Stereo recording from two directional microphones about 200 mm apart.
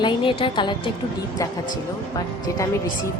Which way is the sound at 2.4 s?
20° left (ahead or behind).